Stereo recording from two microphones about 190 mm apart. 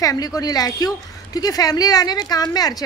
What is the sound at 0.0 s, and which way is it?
Speech, 20° left (ahead or behind).